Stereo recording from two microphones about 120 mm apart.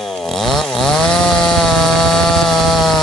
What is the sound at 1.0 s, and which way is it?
Chainsaw, 5° left (ahead or behind).